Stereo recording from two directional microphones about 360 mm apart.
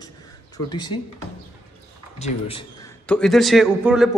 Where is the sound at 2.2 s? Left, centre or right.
Centre.